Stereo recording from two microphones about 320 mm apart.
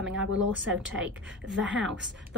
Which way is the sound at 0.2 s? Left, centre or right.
Right.